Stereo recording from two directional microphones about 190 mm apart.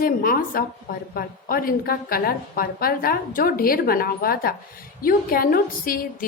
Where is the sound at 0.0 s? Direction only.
50° left (ahead or behind).